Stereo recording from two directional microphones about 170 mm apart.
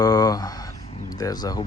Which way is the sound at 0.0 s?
20° left (ahead or behind).